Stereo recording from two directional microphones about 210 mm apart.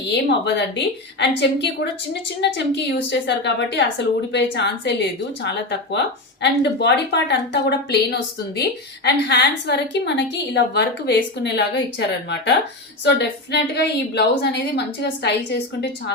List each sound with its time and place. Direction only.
0.1 s a woman's voice: 55° left (ahead or behind)
6.4 s a woman's voice: 55° left (ahead or behind)
9.0 s a woman's voice: 55° left (ahead or behind)